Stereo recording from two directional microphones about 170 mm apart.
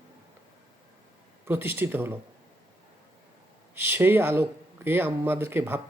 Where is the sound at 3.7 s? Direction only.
15° right (ahead or behind).